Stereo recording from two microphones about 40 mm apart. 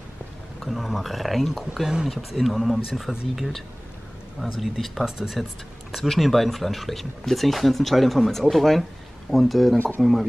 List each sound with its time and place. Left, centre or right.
0.6 s speech: centre
1.7 s speech: centre
2.0 s speech: centre
4.4 s speech: centre
5.0 s speech: centre
5.9 s speech: centre
9.8 s speech: left